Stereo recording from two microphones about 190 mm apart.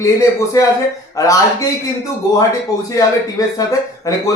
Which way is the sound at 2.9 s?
20° left (ahead or behind).